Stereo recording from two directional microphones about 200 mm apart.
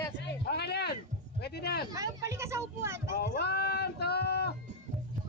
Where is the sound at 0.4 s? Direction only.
55° left (ahead or behind).